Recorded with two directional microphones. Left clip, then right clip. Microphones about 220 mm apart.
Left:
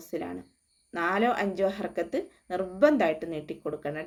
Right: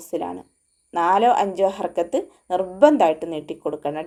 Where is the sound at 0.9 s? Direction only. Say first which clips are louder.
Right 10 dB; 5° right (ahead or behind).